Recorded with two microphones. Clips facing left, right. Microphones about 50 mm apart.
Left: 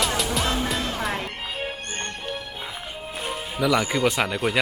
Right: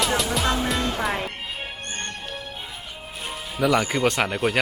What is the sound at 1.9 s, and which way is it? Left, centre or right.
Music, left.